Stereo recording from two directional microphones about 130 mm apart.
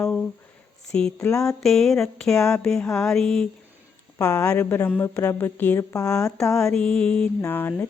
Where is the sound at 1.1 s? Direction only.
25° left (ahead or behind).